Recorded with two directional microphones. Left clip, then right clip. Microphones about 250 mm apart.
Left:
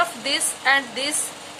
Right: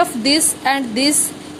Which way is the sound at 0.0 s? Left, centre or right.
Centre.